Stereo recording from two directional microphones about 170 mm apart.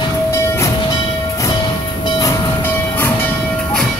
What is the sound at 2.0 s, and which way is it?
Train, 20° left (ahead or behind).